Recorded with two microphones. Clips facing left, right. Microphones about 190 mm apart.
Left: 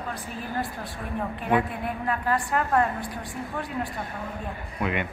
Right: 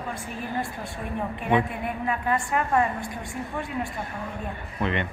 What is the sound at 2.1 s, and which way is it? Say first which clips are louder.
Speech: even; 5° right (ahead or behind).